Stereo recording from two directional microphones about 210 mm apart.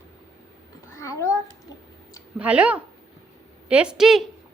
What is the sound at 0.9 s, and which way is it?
Babbling, 15° left (ahead or behind).